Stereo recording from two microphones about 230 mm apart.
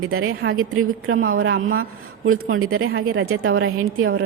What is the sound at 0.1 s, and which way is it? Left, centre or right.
Speech, right.